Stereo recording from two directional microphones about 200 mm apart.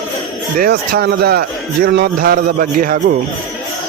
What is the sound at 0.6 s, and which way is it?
A man's voice, 50° right (ahead or behind).